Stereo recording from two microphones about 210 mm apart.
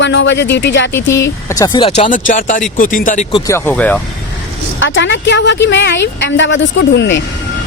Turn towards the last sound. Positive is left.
turn(degrees=55)  # may be behind; listen again after turning